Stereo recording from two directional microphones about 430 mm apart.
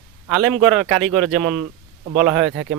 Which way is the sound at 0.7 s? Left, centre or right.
Centre.